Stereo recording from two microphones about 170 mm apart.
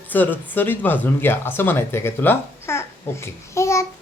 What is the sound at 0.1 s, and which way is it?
Speech, 10° left (ahead or behind).